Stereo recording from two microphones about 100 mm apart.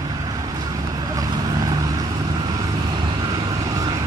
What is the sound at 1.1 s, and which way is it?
Vehicle, 40° right (ahead or behind).